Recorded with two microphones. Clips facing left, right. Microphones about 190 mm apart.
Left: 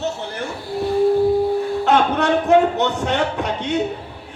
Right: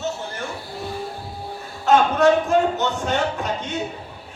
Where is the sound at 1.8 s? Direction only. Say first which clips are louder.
Right 4 dB; 65° left (ahead or behind).